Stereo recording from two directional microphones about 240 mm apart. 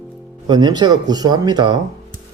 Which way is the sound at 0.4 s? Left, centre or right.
Centre.